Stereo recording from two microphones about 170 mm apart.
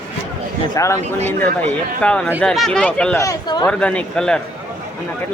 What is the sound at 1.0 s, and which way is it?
Speech, 40° right (ahead or behind).